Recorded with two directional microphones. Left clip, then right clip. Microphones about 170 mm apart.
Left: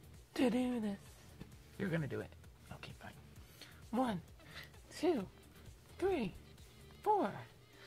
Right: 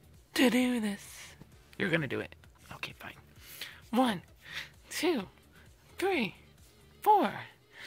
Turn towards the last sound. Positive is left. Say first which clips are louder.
# right 9 dB
turn(degrees=-20)  # may be behind; listen again after turning